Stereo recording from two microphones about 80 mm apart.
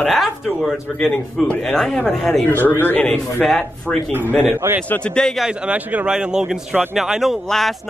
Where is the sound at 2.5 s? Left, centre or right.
Left.